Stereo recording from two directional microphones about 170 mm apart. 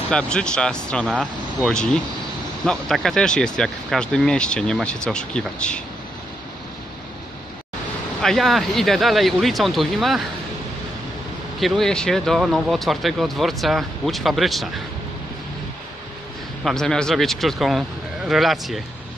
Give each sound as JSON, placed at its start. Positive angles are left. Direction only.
{"t": 0.1, "sound": "speech", "side_deg": 5}
{"t": 8.2, "sound": "speech", "side_deg": 0}
{"t": 11.6, "sound": "speech", "side_deg": 0}
{"t": 16.6, "sound": "speech", "side_deg": 5}